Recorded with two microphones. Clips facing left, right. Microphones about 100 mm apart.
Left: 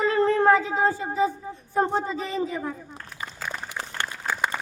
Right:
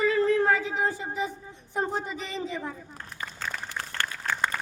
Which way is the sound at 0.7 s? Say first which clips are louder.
Left 5 dB; 25° left (ahead or behind).